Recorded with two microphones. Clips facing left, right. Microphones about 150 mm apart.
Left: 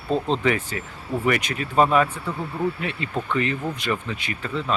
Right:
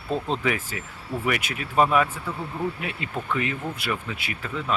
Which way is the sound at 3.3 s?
5° right (ahead or behind).